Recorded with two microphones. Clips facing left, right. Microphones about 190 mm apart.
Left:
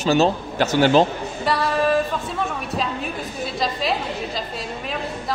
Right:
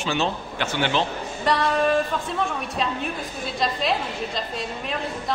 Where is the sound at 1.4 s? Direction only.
Centre (ahead or behind).